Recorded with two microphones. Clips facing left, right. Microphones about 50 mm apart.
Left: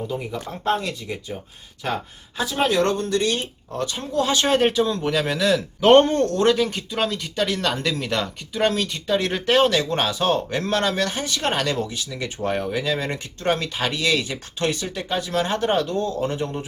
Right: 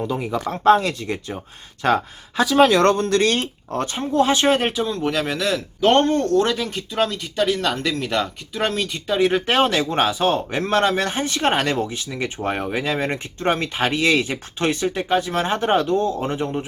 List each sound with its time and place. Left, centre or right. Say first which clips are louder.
0.1 s speech: right 5 dB; right
3.8 s speech: right 4 dB; right
4.5 s speech: left 2 dB; centre
5.8 s speech: left 3 dB; centre
6.1 s speech: even; centre
9.5 s speech: even; right